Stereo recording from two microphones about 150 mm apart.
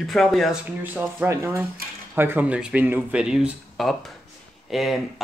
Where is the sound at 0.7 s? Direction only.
15° right (ahead or behind).